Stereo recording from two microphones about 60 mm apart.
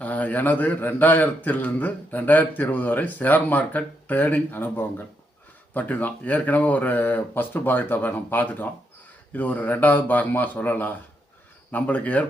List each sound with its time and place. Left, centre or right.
0.0 s a man's voice: left